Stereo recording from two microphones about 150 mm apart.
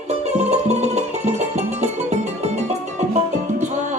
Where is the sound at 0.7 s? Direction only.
50° right (ahead or behind).